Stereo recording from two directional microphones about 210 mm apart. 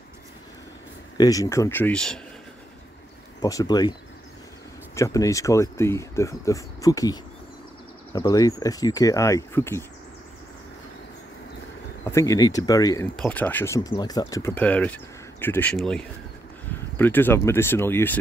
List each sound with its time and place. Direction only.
1.1 s speech: 15° left (ahead or behind)
3.3 s speech: 15° left (ahead or behind)
4.9 s speech: 15° left (ahead or behind)
12.0 s speech: 15° left (ahead or behind)
13.1 s speech: 5° left (ahead or behind)